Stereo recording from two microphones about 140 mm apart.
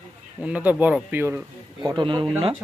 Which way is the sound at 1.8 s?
35° right (ahead or behind).